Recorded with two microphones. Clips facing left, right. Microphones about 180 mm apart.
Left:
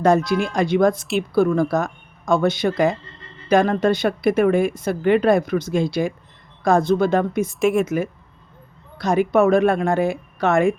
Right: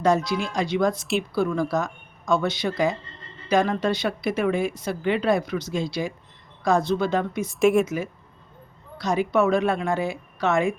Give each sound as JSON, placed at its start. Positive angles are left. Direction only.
{"t": 0.0, "sound": "a woman's voice", "side_deg": 55}
{"t": 0.9, "sound": "speech", "side_deg": 0}
{"t": 1.3, "sound": "a woman's voice", "side_deg": 50}
{"t": 7.6, "sound": "speech", "side_deg": 0}
{"t": 7.9, "sound": "a woman's voice", "side_deg": 50}